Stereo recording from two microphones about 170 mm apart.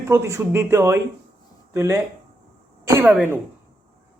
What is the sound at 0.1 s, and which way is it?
Speech, 15° right (ahead or behind).